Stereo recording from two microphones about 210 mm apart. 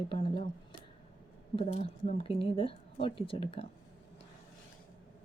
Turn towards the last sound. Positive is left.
turn(degrees=25)  # may be behind; listen again after turning